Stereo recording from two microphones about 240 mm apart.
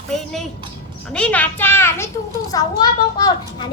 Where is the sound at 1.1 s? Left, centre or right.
Centre.